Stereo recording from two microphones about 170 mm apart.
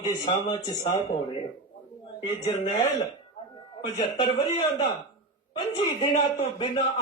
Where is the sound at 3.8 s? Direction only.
30° left (ahead or behind).